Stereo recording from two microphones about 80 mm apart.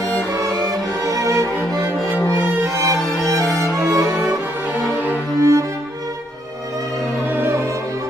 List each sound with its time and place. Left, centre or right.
0.3 s music: right
3.7 s music: right
5.4 s music: right